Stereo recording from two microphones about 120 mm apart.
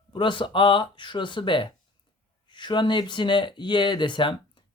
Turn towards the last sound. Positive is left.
turn(degrees=45)  # may be behind; listen again after turning